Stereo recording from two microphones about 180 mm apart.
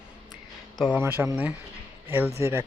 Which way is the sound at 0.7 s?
5° right (ahead or behind).